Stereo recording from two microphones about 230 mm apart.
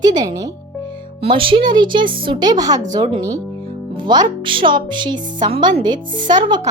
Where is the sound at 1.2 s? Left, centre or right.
Right.